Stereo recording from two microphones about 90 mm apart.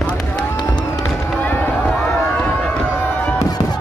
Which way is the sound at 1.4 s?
20° left (ahead or behind).